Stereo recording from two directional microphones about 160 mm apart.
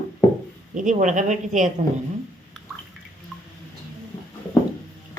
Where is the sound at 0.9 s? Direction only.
50° right (ahead or behind).